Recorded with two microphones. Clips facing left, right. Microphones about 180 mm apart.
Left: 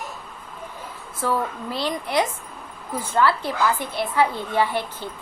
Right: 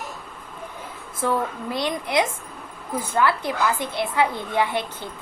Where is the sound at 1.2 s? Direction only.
20° right (ahead or behind).